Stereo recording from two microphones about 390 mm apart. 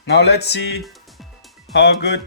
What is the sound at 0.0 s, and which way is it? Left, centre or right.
Speech, left.